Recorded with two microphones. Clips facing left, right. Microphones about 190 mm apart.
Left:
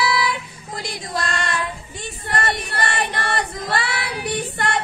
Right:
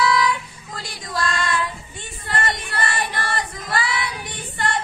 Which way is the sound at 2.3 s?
30° left (ahead or behind).